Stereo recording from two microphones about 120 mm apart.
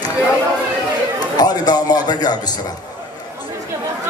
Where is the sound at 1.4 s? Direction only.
35° left (ahead or behind).